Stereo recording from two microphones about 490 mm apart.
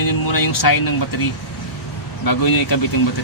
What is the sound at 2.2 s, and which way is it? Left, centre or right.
Speech, left.